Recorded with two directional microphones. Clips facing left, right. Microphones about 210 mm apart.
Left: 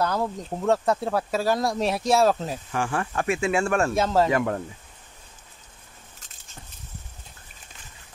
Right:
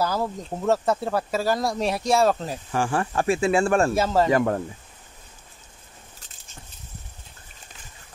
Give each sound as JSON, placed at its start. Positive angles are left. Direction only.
{"t": 0.0, "sound": "speech", "side_deg": 0}
{"t": 2.7, "sound": "speech", "side_deg": -35}
{"t": 3.9, "sound": "speech", "side_deg": 0}
{"t": 4.3, "sound": "speech", "side_deg": -35}